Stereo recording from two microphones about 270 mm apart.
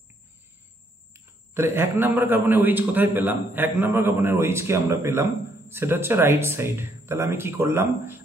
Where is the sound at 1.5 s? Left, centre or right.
Centre.